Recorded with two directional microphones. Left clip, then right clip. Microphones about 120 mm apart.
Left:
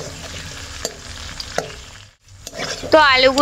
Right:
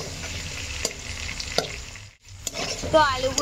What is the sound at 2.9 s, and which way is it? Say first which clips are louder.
Rowboat: left 8 dB; 45° left (ahead or behind).